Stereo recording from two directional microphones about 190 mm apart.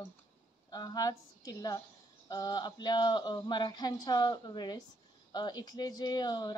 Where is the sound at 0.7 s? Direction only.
20° left (ahead or behind).